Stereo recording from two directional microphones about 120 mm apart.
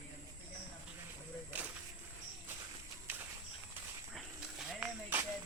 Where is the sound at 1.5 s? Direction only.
15° right (ahead or behind).